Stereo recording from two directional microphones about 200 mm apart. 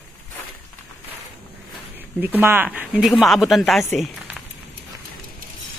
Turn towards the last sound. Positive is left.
turn(degrees=0)  # may be behind; listen again after turning